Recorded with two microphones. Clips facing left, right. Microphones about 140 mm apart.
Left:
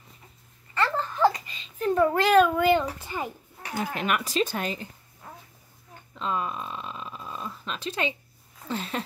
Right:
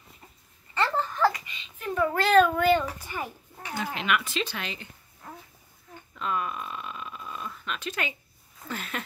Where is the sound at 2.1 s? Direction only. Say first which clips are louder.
Right 2 dB; 15° left (ahead or behind).